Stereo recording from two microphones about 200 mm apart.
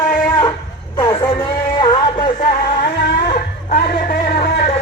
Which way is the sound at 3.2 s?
40° left (ahead or behind).